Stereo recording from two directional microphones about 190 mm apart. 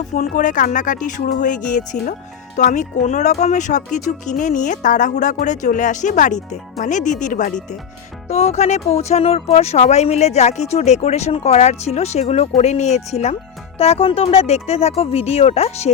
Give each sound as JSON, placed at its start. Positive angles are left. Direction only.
{"t": 0.1, "sound": "speech", "side_deg": 40}